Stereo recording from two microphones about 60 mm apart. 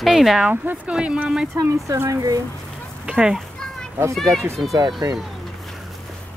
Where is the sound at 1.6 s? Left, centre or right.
Right.